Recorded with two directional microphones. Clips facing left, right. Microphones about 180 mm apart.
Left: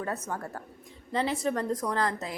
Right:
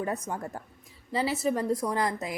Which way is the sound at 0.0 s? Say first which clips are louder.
Right 2 dB; 15° right (ahead or behind).